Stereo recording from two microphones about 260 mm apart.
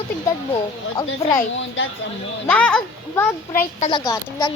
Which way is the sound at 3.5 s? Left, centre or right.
Left.